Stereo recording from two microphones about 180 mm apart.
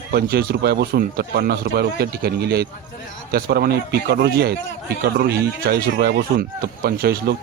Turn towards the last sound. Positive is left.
turn(degrees=-60)  # may be behind; listen again after turning